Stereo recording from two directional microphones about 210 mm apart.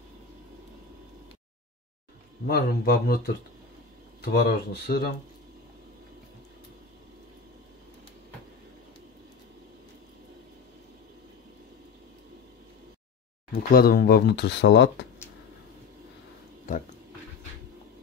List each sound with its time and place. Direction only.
2.4 s speech: 50° left (ahead or behind)
4.2 s speech: 45° left (ahead or behind)
13.5 s speech: 45° left (ahead or behind)